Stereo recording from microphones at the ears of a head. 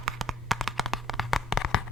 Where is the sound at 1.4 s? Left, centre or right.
Left.